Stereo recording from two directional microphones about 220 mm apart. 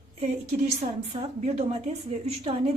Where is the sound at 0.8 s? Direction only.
30° right (ahead or behind).